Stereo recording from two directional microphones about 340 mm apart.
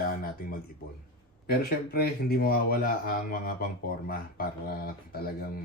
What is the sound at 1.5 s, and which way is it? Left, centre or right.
Speech, left.